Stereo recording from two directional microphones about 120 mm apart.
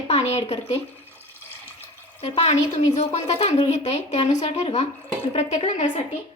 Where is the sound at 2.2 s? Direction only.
60° left (ahead or behind).